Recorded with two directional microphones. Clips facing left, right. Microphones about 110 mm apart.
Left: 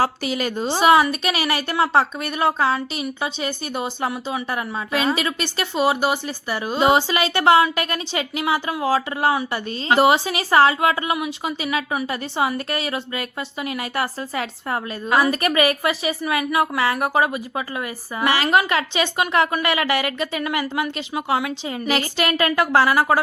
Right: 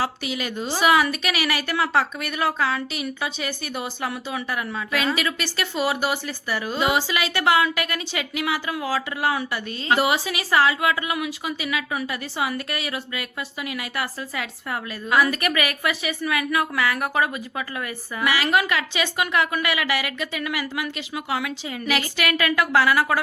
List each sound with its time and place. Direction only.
0.0 s a woman's voice: 40° left (ahead or behind)